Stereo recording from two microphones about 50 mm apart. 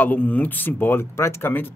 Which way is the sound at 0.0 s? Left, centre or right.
Left.